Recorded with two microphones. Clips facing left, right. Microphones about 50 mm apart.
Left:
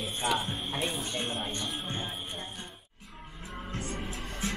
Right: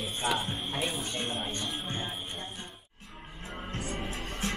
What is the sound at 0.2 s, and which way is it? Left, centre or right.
Music, centre.